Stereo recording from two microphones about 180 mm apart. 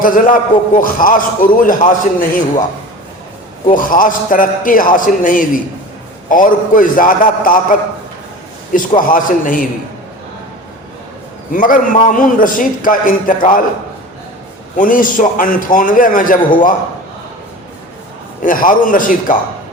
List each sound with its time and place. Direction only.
0.0 s a man's voice: 50° left (ahead or behind)
3.7 s a man's voice: 50° left (ahead or behind)
11.5 s a man's voice: 50° left (ahead or behind)
14.8 s a man's voice: 50° left (ahead or behind)
18.4 s a man's voice: 50° left (ahead or behind)